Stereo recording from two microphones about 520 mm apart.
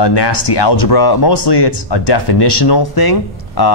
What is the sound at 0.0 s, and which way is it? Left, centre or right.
Speech, left.